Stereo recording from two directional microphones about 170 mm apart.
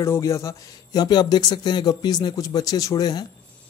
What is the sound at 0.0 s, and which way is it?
Speech, 15° left (ahead or behind).